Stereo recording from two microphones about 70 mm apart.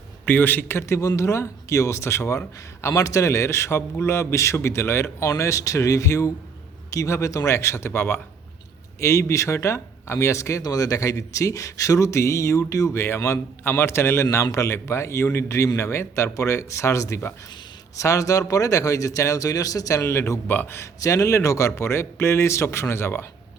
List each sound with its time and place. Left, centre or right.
0.3 s speech: left
10.6 s speech: left
20.5 s a man's voice: left